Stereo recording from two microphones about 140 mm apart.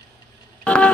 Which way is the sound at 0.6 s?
10° left (ahead or behind).